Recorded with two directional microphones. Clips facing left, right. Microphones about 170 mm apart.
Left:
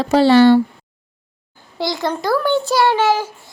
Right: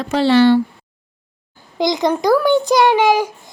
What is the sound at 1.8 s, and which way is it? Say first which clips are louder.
A child's voice: right 5 dB; 15° right (ahead or behind).